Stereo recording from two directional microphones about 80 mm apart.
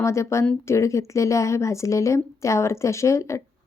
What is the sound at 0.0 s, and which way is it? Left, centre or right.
Speech, left.